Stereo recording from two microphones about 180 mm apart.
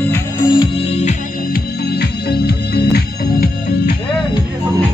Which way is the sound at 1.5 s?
65° left (ahead or behind).